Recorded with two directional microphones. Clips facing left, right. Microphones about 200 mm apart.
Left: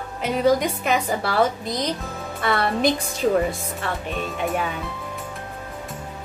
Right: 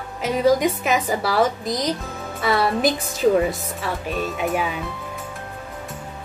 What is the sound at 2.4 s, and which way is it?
A woman's voice, 5° right (ahead or behind).